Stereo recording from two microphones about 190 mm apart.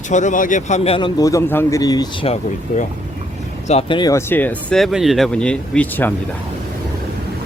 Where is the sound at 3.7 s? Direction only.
30° left (ahead or behind); by 6.1 s 10° left (ahead or behind).